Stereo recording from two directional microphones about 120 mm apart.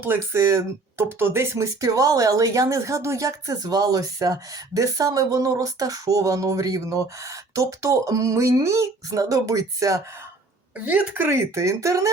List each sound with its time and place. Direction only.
0.0 s speech: 20° right (ahead or behind)
10.8 s speech: 15° right (ahead or behind)